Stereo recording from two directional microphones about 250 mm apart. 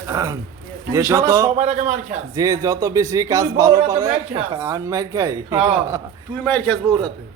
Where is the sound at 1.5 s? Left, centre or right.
Right.